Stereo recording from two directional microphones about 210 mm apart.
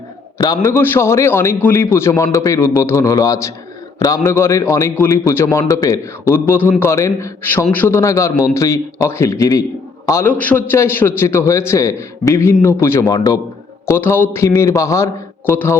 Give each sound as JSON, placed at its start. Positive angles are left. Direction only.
{"t": 0.3, "sound": "a man's voice", "side_deg": 20}